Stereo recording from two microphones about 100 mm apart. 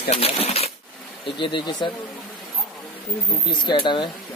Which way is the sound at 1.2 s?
55° left (ahead or behind).